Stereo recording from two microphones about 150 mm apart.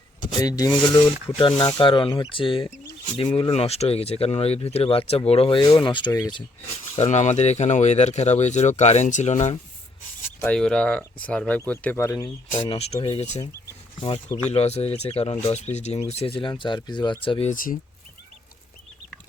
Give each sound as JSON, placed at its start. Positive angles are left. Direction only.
{"t": 0.3, "sound": "speech", "side_deg": 25}
{"t": 6.9, "sound": "speech", "side_deg": 50}
{"t": 10.4, "sound": "speech", "side_deg": 5}
{"t": 12.6, "sound": "speech", "side_deg": 40}
{"t": 14.5, "sound": "speech", "side_deg": 45}
{"t": 17.5, "sound": "speech", "side_deg": 65}